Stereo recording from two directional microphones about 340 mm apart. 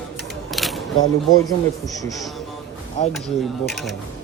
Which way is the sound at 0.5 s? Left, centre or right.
Centre.